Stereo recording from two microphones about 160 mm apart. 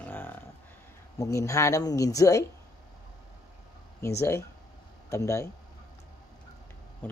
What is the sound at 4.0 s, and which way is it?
Speech, 15° left (ahead or behind).